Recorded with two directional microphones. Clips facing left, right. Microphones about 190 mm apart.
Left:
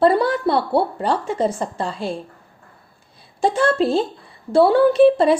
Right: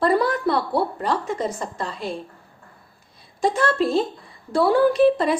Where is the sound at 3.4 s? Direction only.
30° left (ahead or behind).